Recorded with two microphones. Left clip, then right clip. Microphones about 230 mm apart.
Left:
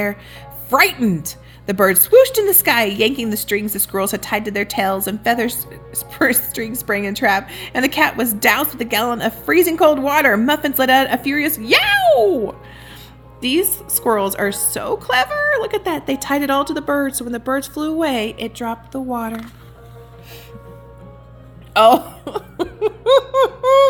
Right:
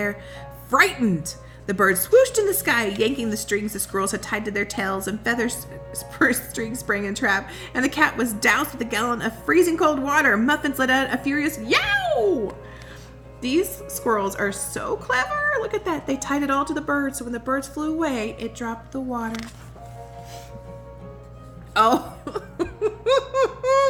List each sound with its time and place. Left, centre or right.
0.7 s a woman's voice: left
13.4 s a woman's voice: left
22.2 s a sound: left